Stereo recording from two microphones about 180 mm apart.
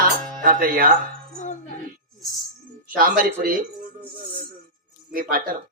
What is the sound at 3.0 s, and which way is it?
Speech, 50° right (ahead or behind).